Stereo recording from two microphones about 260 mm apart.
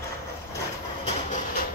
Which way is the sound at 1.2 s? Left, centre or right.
Left.